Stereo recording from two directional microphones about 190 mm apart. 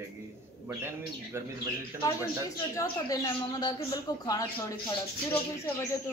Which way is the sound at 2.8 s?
15° left (ahead or behind).